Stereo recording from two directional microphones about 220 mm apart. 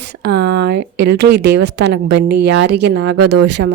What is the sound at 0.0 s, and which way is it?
Speech, 50° right (ahead or behind).